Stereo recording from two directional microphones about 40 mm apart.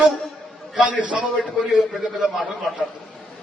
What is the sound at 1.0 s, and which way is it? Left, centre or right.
Speech, right.